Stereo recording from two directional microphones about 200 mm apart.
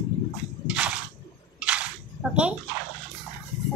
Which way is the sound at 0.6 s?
5° right (ahead or behind).